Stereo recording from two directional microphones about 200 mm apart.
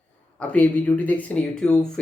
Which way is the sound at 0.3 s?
5° left (ahead or behind).